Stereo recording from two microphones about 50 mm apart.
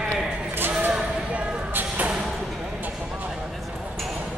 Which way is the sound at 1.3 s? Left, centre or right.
Right.